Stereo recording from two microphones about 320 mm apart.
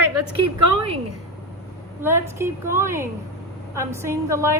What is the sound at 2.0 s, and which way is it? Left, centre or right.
A woman's voice, centre.